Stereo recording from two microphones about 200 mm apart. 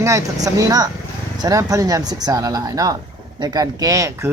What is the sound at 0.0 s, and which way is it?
Speech, 15° right (ahead or behind).